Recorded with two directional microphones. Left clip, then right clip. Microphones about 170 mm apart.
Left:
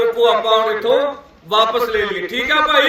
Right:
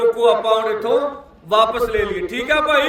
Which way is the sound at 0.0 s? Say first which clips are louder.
Left 1 dB; 30° right (ahead or behind).